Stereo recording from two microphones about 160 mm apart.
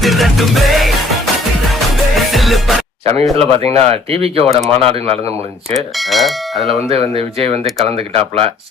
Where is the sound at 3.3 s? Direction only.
40° right (ahead or behind).